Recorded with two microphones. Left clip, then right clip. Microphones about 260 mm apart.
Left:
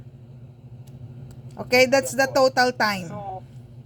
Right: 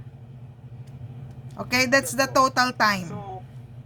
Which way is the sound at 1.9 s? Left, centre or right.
Right.